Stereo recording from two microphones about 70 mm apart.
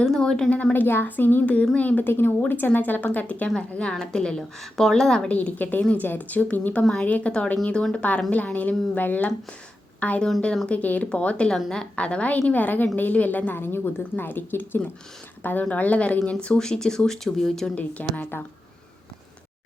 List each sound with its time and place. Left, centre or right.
0.0 s speech: centre
0.5 s a woman's voice: left
3.5 s speech: centre
5.3 s a woman's voice: left
17.7 s a woman's voice: left